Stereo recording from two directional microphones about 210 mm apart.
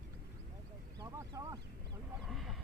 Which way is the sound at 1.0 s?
15° right (ahead or behind).